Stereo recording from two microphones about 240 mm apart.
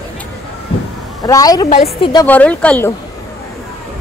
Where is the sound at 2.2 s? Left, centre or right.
Centre.